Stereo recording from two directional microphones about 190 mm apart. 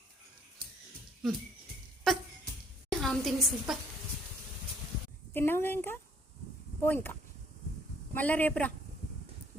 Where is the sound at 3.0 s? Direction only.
Centre (ahead or behind).